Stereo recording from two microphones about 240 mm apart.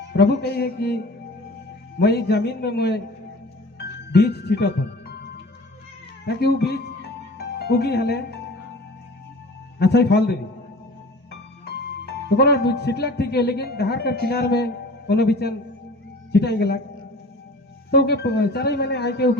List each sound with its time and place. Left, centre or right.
0.1 s a man's voice: left
3.8 s music: left
6.2 s a man's voice: left
9.7 s a man's voice: left
12.4 s a man's voice: left
17.9 s a man's voice: left